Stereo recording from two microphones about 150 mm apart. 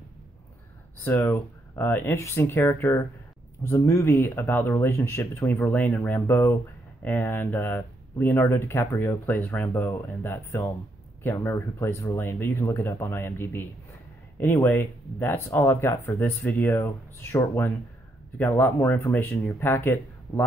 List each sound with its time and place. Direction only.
1.0 s speech: 15° left (ahead or behind)